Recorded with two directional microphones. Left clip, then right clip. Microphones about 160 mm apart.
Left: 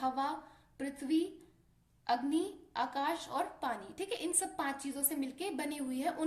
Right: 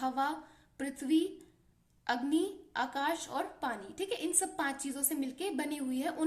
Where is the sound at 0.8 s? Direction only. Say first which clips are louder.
Right 3 dB; 50° right (ahead or behind).